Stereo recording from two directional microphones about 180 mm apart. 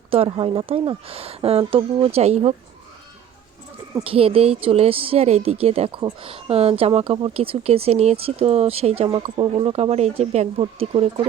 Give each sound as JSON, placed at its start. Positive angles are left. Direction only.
{"t": 0.1, "sound": "speech", "side_deg": -30}
{"t": 4.0, "sound": "speech", "side_deg": -30}